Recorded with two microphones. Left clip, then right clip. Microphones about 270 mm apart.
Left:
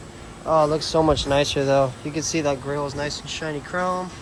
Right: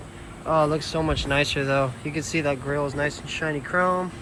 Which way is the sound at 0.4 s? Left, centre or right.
Centre.